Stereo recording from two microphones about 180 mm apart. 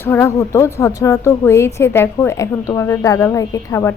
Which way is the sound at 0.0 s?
15° left (ahead or behind).